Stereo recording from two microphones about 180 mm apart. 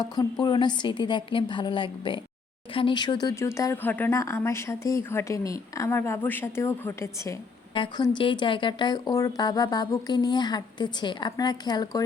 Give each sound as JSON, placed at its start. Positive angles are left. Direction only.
{"t": 0.0, "sound": "speech", "side_deg": 20}
{"t": 7.7, "sound": "speech", "side_deg": 25}